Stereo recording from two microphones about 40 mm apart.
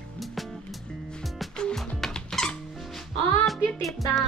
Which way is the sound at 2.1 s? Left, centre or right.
Centre.